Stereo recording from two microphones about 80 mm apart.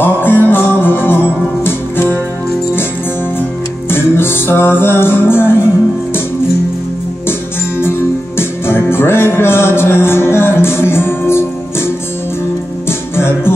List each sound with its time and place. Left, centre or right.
0.0 s music: left
3.9 s music: left
8.4 s music: left
13.1 s music: left